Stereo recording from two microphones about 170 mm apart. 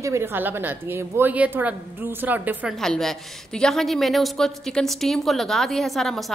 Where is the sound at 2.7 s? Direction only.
Centre (ahead or behind).